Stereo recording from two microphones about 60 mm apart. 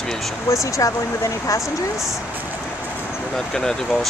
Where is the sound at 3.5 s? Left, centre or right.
Centre.